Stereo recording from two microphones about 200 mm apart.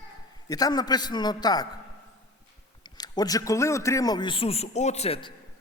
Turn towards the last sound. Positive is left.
turn(degrees=25)  # may be behind; listen again after turning